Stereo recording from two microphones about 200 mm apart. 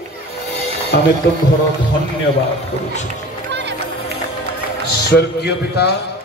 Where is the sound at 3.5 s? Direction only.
60° right (ahead or behind).